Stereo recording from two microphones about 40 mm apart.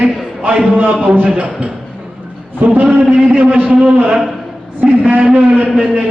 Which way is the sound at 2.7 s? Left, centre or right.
Right.